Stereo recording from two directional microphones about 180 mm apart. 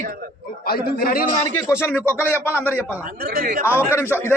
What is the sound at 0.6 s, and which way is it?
Speech, 55° left (ahead or behind).